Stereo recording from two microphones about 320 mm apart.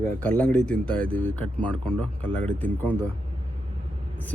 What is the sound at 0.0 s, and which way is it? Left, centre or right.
A man's voice, centre.